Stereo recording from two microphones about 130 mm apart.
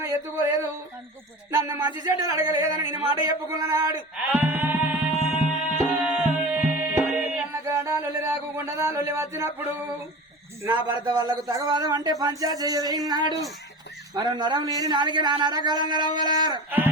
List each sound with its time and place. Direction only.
1.5 s speech: 25° right (ahead or behind)
3.9 s music: 15° right (ahead or behind)
10.7 s a man's voice: 35° right (ahead or behind)